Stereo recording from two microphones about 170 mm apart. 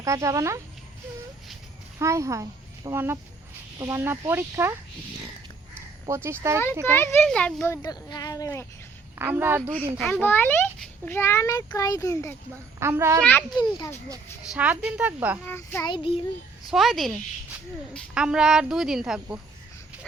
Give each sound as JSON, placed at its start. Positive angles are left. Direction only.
{"t": 0.0, "sound": "speech", "side_deg": -20}
{"t": 2.0, "sound": "speech", "side_deg": -15}
{"t": 6.1, "sound": "speech", "side_deg": -15}
{"t": 6.9, "sound": "a child's voice", "side_deg": 15}
{"t": 7.8, "sound": "speech", "side_deg": 25}
{"t": 9.1, "sound": "speech", "side_deg": -15}
{"t": 10.0, "sound": "a child's voice", "side_deg": 10}
{"t": 12.8, "sound": "speech", "side_deg": -15}
{"t": 13.6, "sound": "speech", "side_deg": 20}
{"t": 14.5, "sound": "speech", "side_deg": -10}
{"t": 15.4, "sound": "a child's voice", "side_deg": 15}
{"t": 15.9, "sound": "a child's voice", "side_deg": 30}
{"t": 16.6, "sound": "a woman's voice", "side_deg": 0}